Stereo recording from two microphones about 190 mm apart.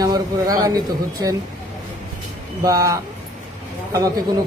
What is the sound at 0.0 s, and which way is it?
Speech, 20° right (ahead or behind).